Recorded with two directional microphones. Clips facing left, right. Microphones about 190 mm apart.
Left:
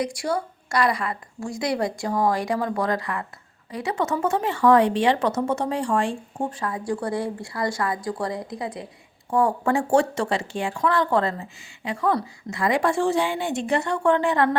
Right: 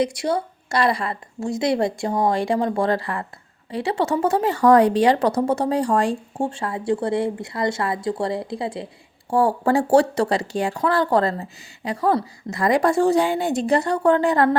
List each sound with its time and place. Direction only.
0.0 s a woman's voice: 20° right (ahead or behind); by 14.5 s 40° right (ahead or behind)